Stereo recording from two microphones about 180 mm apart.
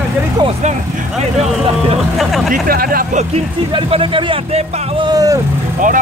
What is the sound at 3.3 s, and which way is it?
Speech, 30° right (ahead or behind).